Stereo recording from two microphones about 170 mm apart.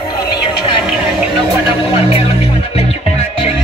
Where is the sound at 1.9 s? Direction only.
30° left (ahead or behind).